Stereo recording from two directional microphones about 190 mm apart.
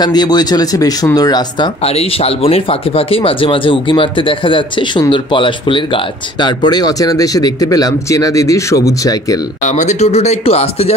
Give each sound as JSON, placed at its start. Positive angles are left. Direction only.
{"t": 0.0, "sound": "speech", "side_deg": 20}
{"t": 1.9, "sound": "speech", "side_deg": 30}
{"t": 9.7, "sound": "speech", "side_deg": 40}